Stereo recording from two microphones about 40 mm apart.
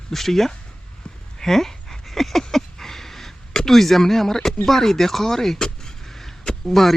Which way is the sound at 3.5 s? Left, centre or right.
Centre.